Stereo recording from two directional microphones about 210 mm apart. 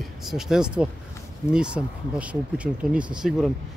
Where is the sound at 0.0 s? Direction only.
Centre (ahead or behind).